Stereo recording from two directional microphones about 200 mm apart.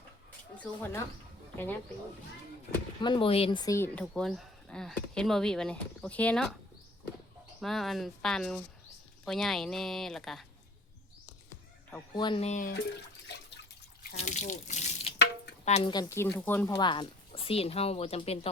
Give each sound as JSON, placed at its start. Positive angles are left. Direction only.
{"t": 0.6, "sound": "speech", "side_deg": 10}
{"t": 3.0, "sound": "speech", "side_deg": 25}
{"t": 7.6, "sound": "speech", "side_deg": 0}
{"t": 12.1, "sound": "speech", "side_deg": 25}
{"t": 14.2, "sound": "speech", "side_deg": 35}
{"t": 15.9, "sound": "speech", "side_deg": 20}